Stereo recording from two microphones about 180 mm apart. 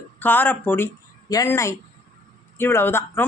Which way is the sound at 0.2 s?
10° left (ahead or behind).